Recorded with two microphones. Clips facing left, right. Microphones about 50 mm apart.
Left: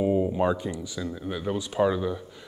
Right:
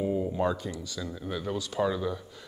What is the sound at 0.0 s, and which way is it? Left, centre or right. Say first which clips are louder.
Speech: left 4 dB; left.